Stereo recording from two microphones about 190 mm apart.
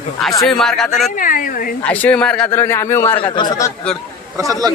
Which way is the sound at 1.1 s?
45° left (ahead or behind).